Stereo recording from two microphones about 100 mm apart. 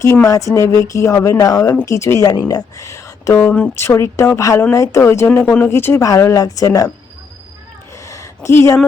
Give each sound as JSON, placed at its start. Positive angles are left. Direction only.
{"t": 0.3, "sound": "speech", "side_deg": 35}
{"t": 3.4, "sound": "speech", "side_deg": 15}
{"t": 3.8, "sound": "speech", "side_deg": 30}
{"t": 7.9, "sound": "a sound", "side_deg": 30}